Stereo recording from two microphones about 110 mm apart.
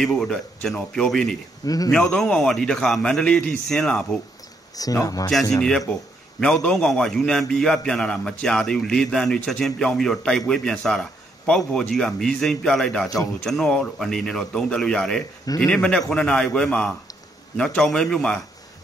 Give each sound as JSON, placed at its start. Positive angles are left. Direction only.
{"t": 0.0, "sound": "a man's voice", "side_deg": 5}
{"t": 4.7, "sound": "speech", "side_deg": 35}
{"t": 5.6, "sound": "a man's voice", "side_deg": 5}